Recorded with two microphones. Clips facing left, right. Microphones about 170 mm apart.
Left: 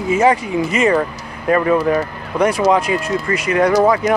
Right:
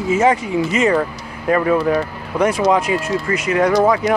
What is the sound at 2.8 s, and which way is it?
Speech, 15° left (ahead or behind).